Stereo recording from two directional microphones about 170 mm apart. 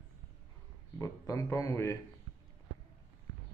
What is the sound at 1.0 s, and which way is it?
Speech, 20° left (ahead or behind).